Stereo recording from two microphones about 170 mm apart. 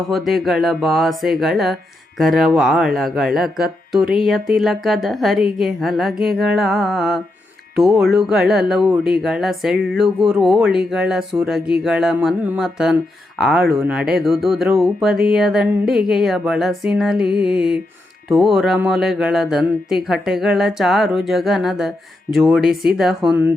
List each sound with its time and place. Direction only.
0.1 s speech: centre (ahead or behind)